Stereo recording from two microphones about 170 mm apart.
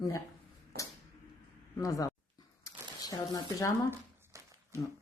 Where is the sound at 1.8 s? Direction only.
20° left (ahead or behind).